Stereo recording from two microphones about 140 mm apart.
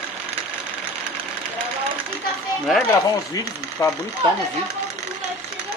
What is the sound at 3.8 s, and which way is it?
Speech, 20° left (ahead or behind).